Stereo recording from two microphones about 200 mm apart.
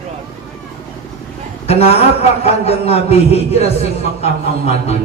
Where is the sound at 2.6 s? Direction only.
30° left (ahead or behind).